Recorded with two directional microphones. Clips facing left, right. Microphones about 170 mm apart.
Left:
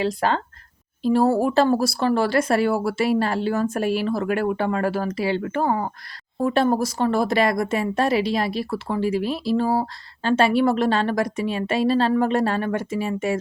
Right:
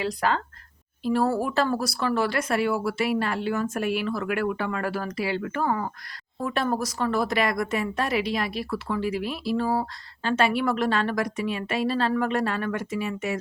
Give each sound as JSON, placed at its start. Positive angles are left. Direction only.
{"t": 0.0, "sound": "a woman's voice", "side_deg": 30}